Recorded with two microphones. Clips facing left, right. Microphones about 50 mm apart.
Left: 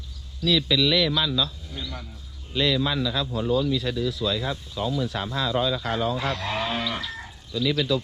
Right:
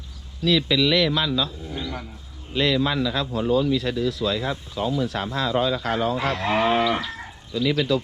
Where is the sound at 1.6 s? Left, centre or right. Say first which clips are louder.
Right 5 dB; right.